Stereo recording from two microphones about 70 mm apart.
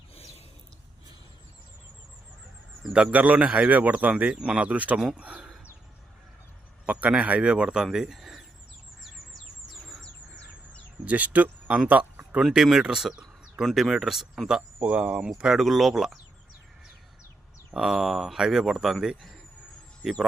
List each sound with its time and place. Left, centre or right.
2.9 s speech: centre
4.9 s speech: centre
6.8 s speech: centre
7.9 s a sound: centre
9.3 s bird: centre
11.0 s speech: right
11.9 s a sound: right
12.4 s speech: centre
14.8 s speech: centre
15.4 s speech: centre
17.7 s speech: centre